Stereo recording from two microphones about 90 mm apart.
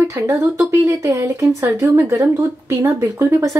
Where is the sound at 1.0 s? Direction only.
35° right (ahead or behind).